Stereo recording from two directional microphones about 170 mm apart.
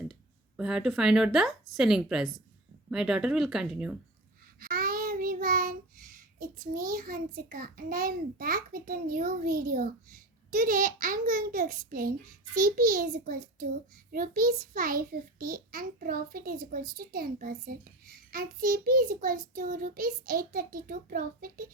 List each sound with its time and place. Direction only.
0.1 s speech: 5° right (ahead or behind)
4.6 s child singing: 60° right (ahead or behind)